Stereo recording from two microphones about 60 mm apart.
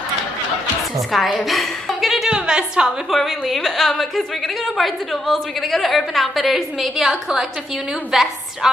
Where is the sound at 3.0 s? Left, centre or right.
Centre.